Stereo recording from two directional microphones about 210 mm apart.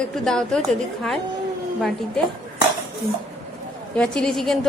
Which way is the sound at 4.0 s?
5° left (ahead or behind).